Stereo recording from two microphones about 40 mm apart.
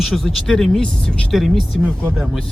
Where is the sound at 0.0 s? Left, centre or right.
Centre.